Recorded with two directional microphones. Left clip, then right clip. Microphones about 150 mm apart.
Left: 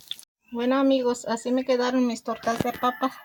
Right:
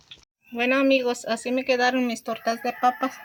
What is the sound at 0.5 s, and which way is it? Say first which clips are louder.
Speech: right 2 dB; 65° left (ahead or behind).